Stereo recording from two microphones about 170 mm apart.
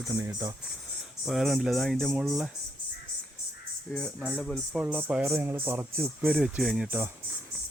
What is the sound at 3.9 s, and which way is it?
Speech, 5° left (ahead or behind).